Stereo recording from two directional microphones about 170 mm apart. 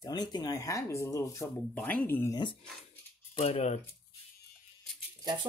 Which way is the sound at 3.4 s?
40° left (ahead or behind).